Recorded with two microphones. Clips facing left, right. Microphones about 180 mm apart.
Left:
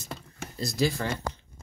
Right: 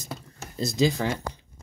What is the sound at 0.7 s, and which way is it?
Speech, 20° right (ahead or behind).